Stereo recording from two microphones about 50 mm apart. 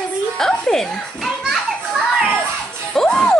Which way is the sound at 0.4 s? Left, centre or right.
Centre.